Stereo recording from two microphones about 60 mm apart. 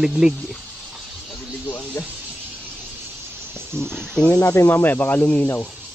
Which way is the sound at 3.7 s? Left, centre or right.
Centre.